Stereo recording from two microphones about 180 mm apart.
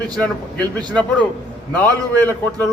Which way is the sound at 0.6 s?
25° right (ahead or behind).